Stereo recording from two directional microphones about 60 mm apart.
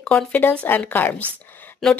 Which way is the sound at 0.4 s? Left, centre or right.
Left.